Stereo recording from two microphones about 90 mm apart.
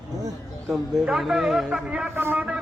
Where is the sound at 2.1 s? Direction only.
25° right (ahead or behind).